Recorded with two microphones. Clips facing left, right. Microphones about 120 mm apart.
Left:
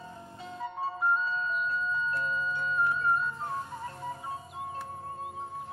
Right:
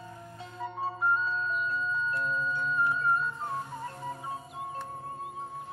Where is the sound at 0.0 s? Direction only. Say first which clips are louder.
Even; 25° left (ahead or behind).